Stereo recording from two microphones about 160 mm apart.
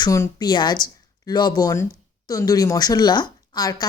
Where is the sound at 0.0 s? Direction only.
20° left (ahead or behind).